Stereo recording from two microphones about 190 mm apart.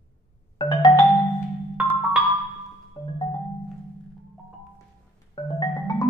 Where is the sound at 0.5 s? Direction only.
25° left (ahead or behind).